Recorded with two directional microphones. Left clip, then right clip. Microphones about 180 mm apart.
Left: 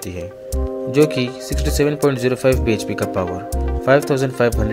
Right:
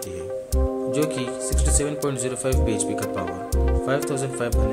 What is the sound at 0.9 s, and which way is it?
Speech, 25° left (ahead or behind).